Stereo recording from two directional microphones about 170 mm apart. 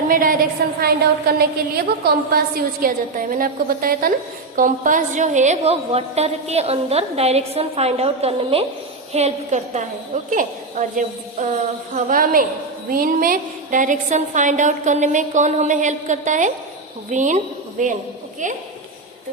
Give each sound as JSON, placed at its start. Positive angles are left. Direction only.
{"t": 0.1, "sound": "a woman's voice", "side_deg": -55}
{"t": 0.6, "sound": "a woman's voice", "side_deg": -65}
{"t": 2.8, "sound": "a woman's voice", "side_deg": -55}